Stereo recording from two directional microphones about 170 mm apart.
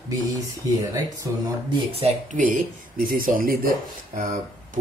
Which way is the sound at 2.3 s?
50° right (ahead or behind).